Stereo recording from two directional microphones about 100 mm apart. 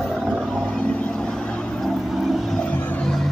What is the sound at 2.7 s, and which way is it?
Music, 15° left (ahead or behind).